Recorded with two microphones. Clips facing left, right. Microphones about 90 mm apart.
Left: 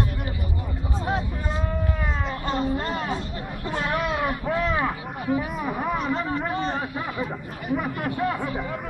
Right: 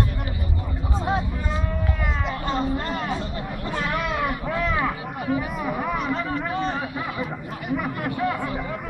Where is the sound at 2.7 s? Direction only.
20° left (ahead or behind).